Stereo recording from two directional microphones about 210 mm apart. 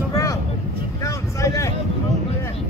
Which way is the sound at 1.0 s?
15° left (ahead or behind).